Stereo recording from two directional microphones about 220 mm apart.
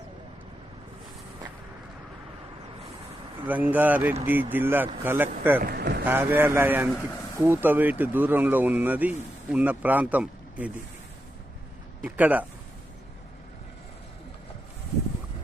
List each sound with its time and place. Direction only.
3.4 s speech: 5° right (ahead or behind)
5.6 s speech: 45° right (ahead or behind)
6.1 s speech: 10° right (ahead or behind)
12.0 s speech: 5° right (ahead or behind)